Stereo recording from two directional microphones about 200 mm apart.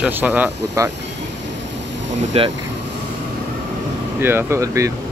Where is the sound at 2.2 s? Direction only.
25° right (ahead or behind).